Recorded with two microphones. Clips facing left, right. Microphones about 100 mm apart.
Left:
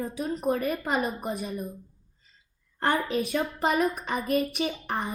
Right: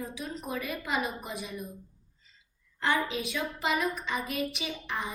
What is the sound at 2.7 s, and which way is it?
A woman's voice, 45° left (ahead or behind).